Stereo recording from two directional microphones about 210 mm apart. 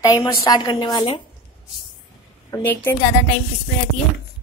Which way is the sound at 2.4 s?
10° left (ahead or behind).